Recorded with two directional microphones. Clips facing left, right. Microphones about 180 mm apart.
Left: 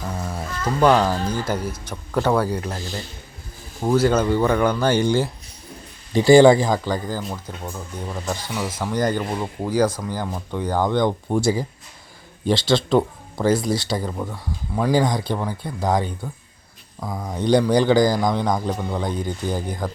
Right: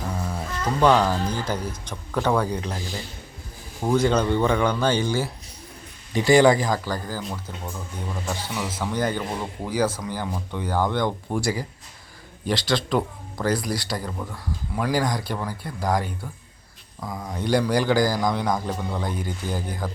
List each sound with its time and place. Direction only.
0.2 s music: 10° left (ahead or behind)
0.8 s speech: 10° left (ahead or behind)
2.7 s speech: 10° right (ahead or behind)
3.8 s speech: 5° left (ahead or behind)
6.1 s a man's voice: 30° left (ahead or behind)
8.3 s a man's voice: 15° left (ahead or behind)
14.3 s a man's voice: 15° left (ahead or behind)
17.0 s a man's voice: 10° left (ahead or behind)